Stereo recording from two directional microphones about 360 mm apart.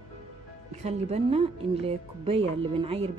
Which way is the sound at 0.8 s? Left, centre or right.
Centre.